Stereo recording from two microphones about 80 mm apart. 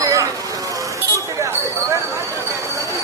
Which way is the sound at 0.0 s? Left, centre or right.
Right.